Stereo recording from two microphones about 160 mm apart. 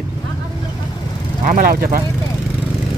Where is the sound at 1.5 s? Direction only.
65° right (ahead or behind).